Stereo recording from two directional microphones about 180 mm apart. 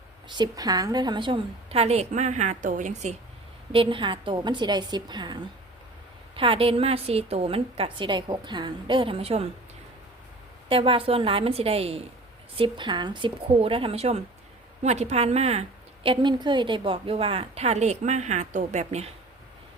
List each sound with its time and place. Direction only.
0.3 s a woman's voice: 25° right (ahead or behind); by 3.2 s 40° right (ahead or behind)
3.7 s a woman's voice: 30° right (ahead or behind)
10.7 s a woman's voice: 30° right (ahead or behind)
16.0 s a woman's voice: 25° right (ahead or behind)